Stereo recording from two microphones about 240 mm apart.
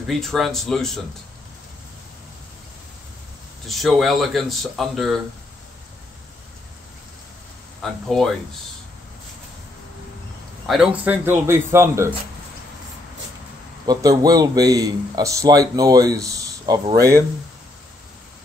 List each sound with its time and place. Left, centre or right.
0.0 s speech: centre
3.6 s speech: centre
7.8 s speech: centre
10.7 s a man's voice: centre
13.8 s a man's voice: centre